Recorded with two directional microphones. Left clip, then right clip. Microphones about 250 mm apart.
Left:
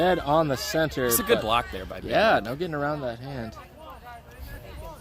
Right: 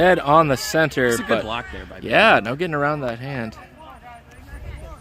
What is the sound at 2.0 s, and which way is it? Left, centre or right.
Speech, right.